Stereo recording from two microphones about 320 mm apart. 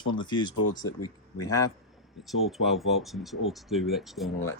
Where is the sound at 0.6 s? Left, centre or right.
Left.